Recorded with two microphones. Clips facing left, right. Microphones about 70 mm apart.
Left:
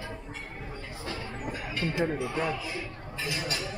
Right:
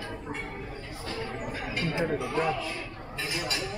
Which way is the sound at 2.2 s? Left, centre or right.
Centre.